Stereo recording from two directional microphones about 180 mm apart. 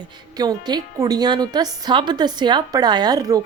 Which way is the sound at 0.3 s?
20° right (ahead or behind).